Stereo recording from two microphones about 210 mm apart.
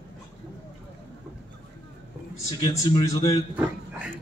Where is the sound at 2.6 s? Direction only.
20° left (ahead or behind).